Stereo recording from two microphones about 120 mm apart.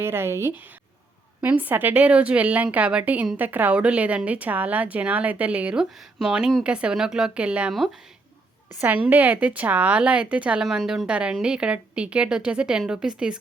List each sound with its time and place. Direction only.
0.0 s speech: 20° right (ahead or behind)
9.0 s speech: 15° right (ahead or behind)